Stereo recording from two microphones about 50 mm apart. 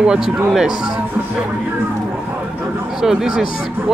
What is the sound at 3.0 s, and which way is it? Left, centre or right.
Speech, centre.